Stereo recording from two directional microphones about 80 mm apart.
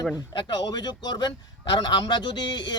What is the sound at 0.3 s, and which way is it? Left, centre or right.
A man's voice, left.